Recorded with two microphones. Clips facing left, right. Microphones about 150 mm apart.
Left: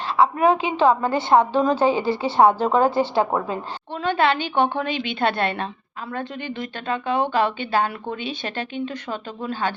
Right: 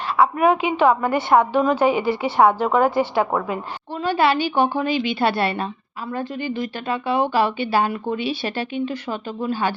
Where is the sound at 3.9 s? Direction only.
5° right (ahead or behind).